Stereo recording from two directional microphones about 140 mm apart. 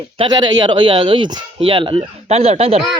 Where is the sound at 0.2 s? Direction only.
30° right (ahead or behind); by 2.8 s 45° right (ahead or behind).